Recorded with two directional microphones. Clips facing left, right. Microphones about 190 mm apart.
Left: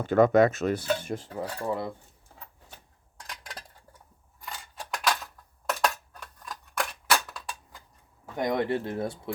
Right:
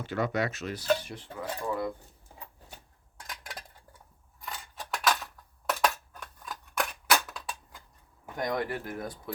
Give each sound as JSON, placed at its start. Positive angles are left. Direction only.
{"t": 0.0, "sound": "speech", "side_deg": 50}
{"t": 3.2, "sound": "a sound", "side_deg": -5}
{"t": 6.1, "sound": "scissors", "side_deg": 0}
{"t": 7.1, "sound": "cap gun", "side_deg": 0}
{"t": 8.4, "sound": "speech", "side_deg": 25}